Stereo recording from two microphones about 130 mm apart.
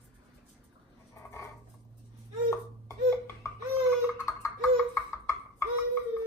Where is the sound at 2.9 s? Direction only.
20° left (ahead or behind).